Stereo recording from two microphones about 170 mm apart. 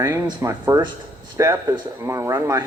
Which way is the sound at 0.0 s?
20° right (ahead or behind).